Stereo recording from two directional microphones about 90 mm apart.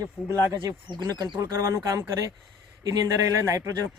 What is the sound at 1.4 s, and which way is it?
Speech, 30° right (ahead or behind).